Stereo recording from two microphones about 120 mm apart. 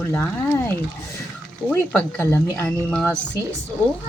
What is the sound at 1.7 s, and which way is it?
Speech, 20° left (ahead or behind).